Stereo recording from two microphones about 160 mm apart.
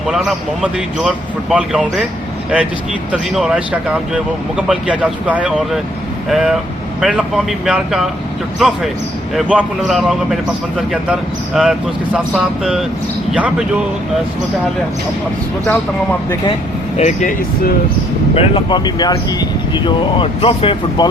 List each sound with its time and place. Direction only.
0.1 s speech: 5° right (ahead or behind)
3.1 s speech: 5° right (ahead or behind)
17.0 s speech: 50° left (ahead or behind)
18.3 s speech: 30° left (ahead or behind)